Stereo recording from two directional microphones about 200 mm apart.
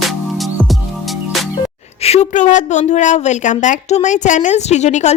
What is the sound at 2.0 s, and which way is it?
A woman's voice, 35° left (ahead or behind).